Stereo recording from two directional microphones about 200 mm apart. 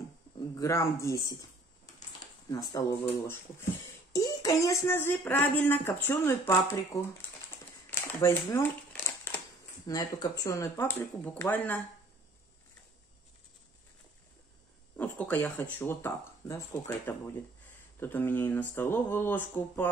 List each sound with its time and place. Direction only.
0.6 s speech: 15° left (ahead or behind)
2.5 s speech: 20° left (ahead or behind)
7.9 s crumpling: 10° left (ahead or behind)
9.8 s speech: 20° left (ahead or behind)
15.0 s speech: 10° left (ahead or behind)